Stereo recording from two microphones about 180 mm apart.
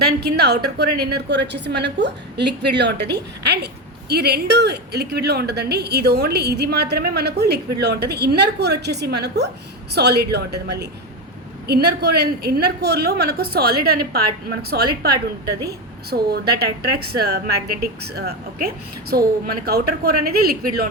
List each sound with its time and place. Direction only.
0.0 s a woman's voice: 65° right (ahead or behind)